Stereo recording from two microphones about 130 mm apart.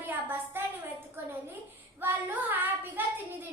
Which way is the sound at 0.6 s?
20° right (ahead or behind).